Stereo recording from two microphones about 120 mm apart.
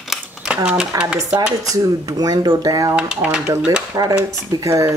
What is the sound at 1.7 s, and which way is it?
Speech, 30° right (ahead or behind).